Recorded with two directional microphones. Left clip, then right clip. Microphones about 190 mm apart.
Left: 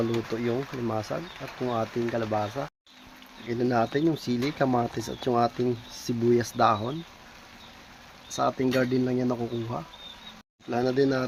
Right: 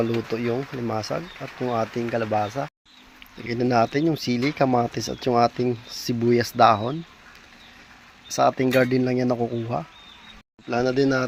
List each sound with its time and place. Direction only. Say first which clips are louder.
0.5 s speech: right 3 dB; 15° right (ahead or behind)
8.3 s speech: right 6 dB; 25° right (ahead or behind)